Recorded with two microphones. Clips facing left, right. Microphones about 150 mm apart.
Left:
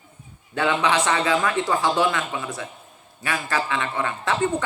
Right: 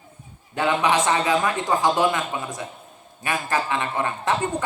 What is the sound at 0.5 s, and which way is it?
A man's voice, 20° right (ahead or behind).